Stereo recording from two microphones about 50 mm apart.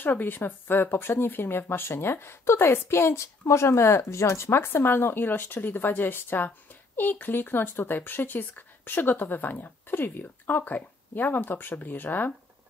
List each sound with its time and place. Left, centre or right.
0.0 s speech: left